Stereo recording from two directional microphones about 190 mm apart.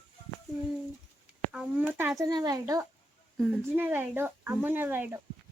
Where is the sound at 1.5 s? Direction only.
5° right (ahead or behind).